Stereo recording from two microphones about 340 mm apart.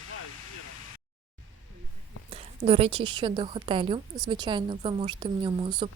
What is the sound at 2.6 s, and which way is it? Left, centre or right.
A woman's voice, centre.